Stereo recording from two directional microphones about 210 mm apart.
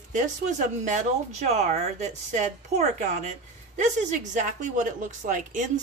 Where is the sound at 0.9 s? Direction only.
35° right (ahead or behind).